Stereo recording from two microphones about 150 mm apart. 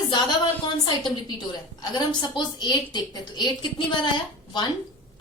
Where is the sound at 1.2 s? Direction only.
30° left (ahead or behind).